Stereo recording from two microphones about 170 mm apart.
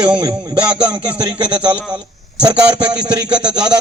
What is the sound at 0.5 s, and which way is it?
Speech, 5° right (ahead or behind).